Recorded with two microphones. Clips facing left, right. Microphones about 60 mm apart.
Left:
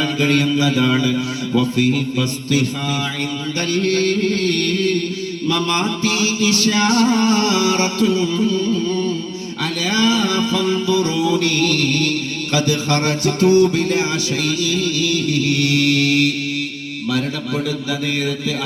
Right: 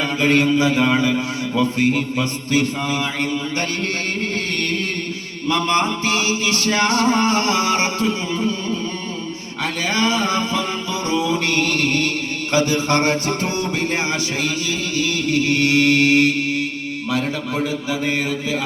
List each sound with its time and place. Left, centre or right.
0.0 s music: right
3.8 s music: right
9.9 s music: right